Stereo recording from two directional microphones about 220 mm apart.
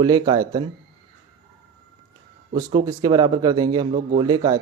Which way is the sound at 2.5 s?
15° right (ahead or behind).